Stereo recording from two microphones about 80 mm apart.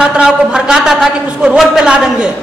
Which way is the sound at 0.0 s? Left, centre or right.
Centre.